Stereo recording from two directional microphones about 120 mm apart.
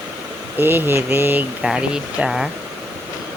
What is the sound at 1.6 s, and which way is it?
Speech, 5° right (ahead or behind).